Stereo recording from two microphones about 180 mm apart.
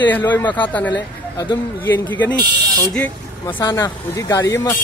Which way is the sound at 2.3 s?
20° right (ahead or behind).